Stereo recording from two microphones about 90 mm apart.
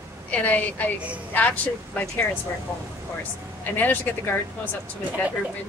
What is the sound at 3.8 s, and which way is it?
Speech, 20° left (ahead or behind).